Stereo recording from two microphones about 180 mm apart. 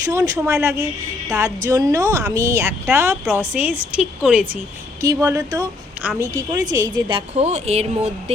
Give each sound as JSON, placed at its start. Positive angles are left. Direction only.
{"t": 0.0, "sound": "a woman's voice", "side_deg": -20}